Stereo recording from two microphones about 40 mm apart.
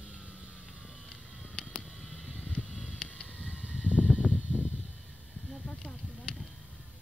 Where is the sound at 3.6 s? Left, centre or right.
Right.